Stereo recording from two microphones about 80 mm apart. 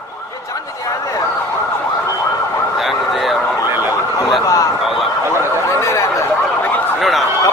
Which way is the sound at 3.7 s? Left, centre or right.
Right.